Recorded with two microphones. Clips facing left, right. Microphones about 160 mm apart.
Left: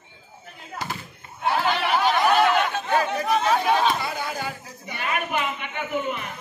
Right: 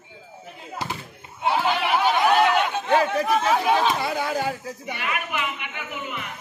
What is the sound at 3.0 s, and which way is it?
Chatter, 5° right (ahead or behind).